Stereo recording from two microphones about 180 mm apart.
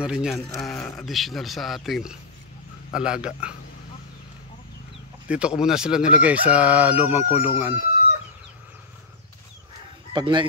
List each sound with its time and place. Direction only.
0.0 s speech: 5° right (ahead or behind)
5.3 s speech: 5° right (ahead or behind)
10.1 s speech: 25° right (ahead or behind)